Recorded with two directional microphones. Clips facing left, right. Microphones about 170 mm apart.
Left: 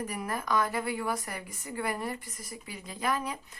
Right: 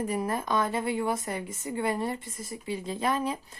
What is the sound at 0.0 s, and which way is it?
A woman's voice, 25° right (ahead or behind).